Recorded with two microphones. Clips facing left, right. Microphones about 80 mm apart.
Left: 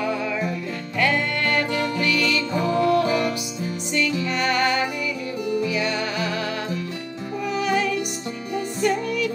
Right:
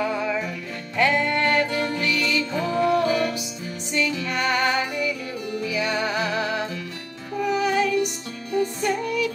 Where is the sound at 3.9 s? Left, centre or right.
Centre.